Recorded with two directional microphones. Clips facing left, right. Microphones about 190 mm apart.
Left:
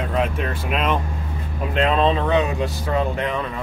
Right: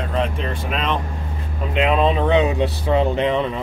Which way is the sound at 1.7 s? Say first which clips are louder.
Right 1 dB; 10° right (ahead or behind).